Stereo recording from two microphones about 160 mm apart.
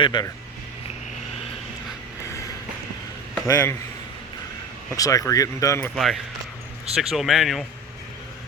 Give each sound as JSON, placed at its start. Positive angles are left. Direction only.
{"t": 0.0, "sound": "speech", "side_deg": 30}
{"t": 3.4, "sound": "speech", "side_deg": 15}
{"t": 4.9, "sound": "speech", "side_deg": 20}
{"t": 6.0, "sound": "speech", "side_deg": 0}